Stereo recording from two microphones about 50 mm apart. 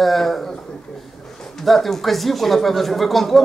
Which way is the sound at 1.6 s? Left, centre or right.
Centre.